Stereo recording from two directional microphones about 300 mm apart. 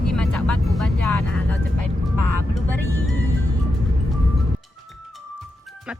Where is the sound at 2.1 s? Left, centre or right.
Left.